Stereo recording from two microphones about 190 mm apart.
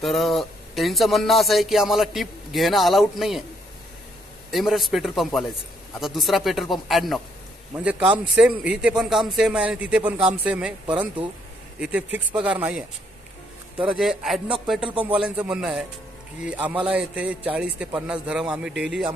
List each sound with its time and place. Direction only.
0.0 s speech: centre (ahead or behind)
4.5 s speech: centre (ahead or behind)
13.9 s speech: centre (ahead or behind)
14.9 s a man's voice: 25° right (ahead or behind)
15.1 s speech: 5° right (ahead or behind)